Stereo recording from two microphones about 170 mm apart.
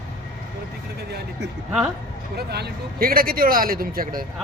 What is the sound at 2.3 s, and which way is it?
Speech, 70° right (ahead or behind).